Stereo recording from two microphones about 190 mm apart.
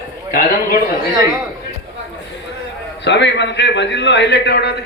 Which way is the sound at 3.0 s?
70° left (ahead or behind).